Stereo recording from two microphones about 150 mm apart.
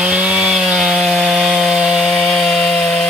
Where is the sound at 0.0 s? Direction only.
10° right (ahead or behind).